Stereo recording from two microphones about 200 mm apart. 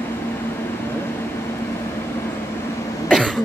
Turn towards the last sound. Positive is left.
turn(degrees=0)  # may be behind; listen again after turning